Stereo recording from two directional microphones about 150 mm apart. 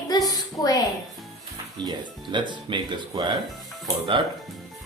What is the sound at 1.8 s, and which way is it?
Speech, 30° right (ahead or behind).